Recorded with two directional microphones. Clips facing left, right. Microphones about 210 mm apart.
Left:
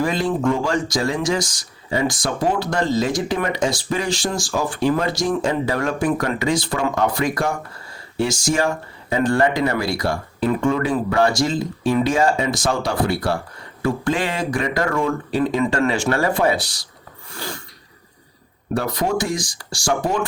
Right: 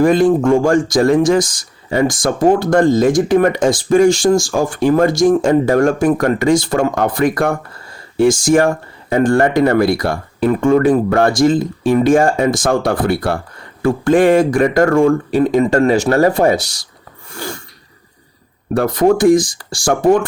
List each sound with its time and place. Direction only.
0.0 s speech: 50° right (ahead or behind)
17.3 s snort: 50° right (ahead or behind)
18.7 s speech: 50° right (ahead or behind)